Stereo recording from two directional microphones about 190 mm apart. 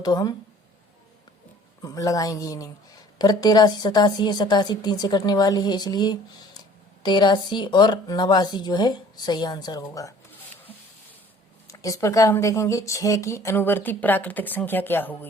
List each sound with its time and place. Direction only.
0.0 s a woman's voice: 20° left (ahead or behind)
1.8 s a woman's voice: 20° left (ahead or behind)
11.7 s speech: 15° left (ahead or behind)